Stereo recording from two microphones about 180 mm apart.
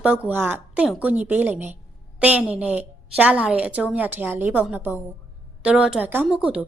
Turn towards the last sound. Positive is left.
turn(degrees=-5)  # may be behind; listen again after turning